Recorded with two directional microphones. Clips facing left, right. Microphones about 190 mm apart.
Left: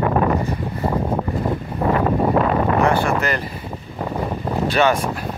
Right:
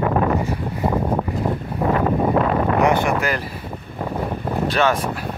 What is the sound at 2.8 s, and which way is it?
Speech, 15° right (ahead or behind).